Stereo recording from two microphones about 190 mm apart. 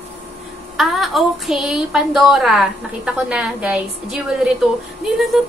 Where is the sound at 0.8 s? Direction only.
Centre (ahead or behind).